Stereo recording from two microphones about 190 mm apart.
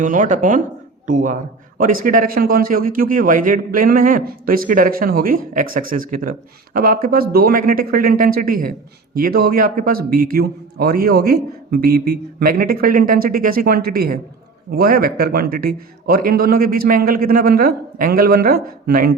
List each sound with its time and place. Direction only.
0.0 s a man's voice: 45° right (ahead or behind)